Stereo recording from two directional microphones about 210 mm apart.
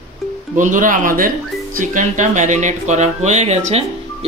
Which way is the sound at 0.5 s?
40° right (ahead or behind).